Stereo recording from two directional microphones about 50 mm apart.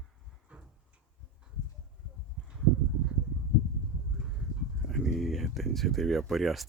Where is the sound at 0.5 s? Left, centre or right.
Right.